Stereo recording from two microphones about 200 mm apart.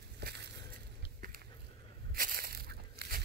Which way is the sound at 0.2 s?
55° right (ahead or behind).